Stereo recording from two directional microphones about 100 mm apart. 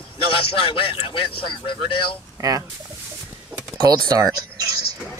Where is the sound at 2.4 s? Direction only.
35° right (ahead or behind).